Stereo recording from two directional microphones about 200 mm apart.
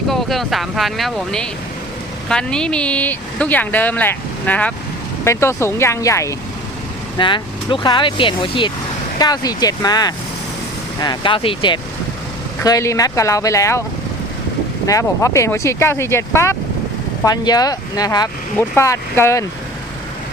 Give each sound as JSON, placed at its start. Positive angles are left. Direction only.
{"t": 0.1, "sound": "speech", "side_deg": 0}
{"t": 14.8, "sound": "speech", "side_deg": 15}